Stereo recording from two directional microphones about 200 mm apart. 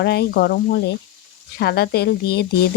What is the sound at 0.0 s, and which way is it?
Speech, 55° left (ahead or behind).